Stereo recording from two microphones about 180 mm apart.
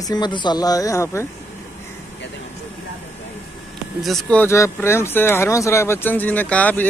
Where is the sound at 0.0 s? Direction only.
25° left (ahead or behind).